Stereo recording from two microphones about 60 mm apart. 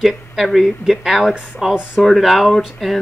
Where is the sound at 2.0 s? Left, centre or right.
Centre.